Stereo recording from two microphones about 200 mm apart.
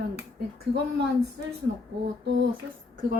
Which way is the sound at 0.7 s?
60° right (ahead or behind).